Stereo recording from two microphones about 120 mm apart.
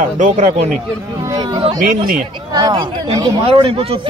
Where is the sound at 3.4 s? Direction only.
50° right (ahead or behind).